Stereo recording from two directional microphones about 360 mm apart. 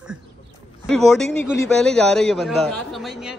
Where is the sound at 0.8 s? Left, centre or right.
Centre.